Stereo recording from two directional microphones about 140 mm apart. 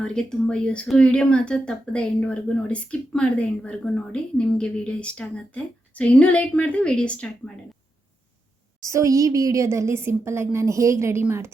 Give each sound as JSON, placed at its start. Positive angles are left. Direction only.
{"t": 0.0, "sound": "speech", "side_deg": 5}
{"t": 8.8, "sound": "a woman's voice", "side_deg": -20}